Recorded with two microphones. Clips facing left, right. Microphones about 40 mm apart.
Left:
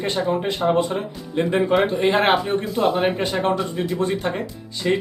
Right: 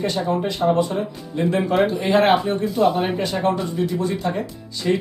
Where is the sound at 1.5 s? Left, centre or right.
Left.